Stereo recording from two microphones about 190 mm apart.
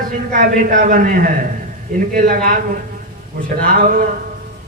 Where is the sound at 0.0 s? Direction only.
45° right (ahead or behind).